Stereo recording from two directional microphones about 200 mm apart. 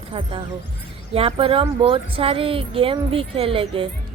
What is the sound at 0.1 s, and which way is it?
Speech, 25° right (ahead or behind).